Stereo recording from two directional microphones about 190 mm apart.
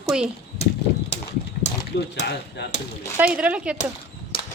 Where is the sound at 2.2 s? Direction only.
60° left (ahead or behind).